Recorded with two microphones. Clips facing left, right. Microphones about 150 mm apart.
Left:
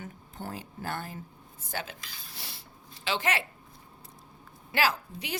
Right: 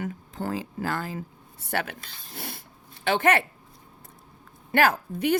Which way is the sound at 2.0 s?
55° right (ahead or behind).